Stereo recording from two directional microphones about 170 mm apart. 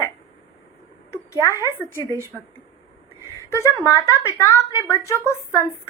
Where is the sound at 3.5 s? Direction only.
15° left (ahead or behind).